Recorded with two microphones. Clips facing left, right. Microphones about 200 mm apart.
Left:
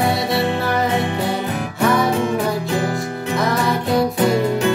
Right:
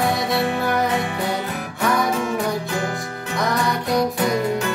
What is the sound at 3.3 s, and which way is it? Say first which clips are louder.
Music: left 2 dB; centre (ahead or behind).